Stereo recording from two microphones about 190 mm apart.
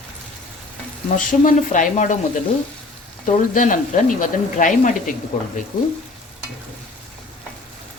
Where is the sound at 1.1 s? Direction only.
45° left (ahead or behind).